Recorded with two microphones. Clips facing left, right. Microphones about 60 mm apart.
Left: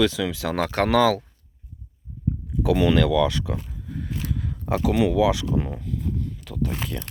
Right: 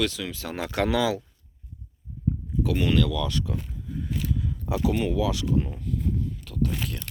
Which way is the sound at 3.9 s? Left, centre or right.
Left.